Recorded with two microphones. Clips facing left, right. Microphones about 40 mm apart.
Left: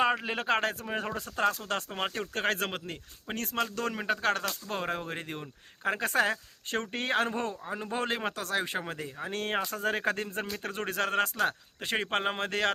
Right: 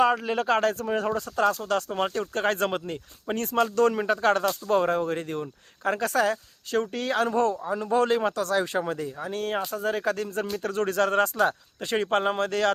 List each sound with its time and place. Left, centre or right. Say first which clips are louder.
0.0 s a man's voice: right 5 dB; left
2.3 s speech: right 4 dB; centre
6.1 s speech: right 2 dB; left
7.7 s a man's voice: right 9 dB; left
9.3 s speech: right 2 dB; left
10.6 s speech: right 8 dB; left; by 11.5 s centre
11.8 s a man's voice: right 5 dB; centre